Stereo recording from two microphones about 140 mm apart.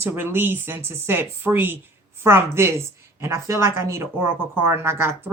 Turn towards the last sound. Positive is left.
turn(degrees=-20)  # may be behind; listen again after turning